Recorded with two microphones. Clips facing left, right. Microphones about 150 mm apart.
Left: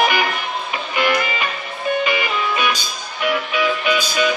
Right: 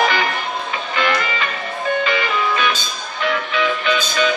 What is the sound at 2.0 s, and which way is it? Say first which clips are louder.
Music: right 1 dB; 15° left (ahead or behind).